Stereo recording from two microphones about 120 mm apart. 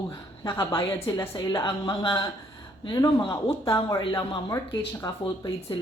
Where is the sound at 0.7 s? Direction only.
20° left (ahead or behind).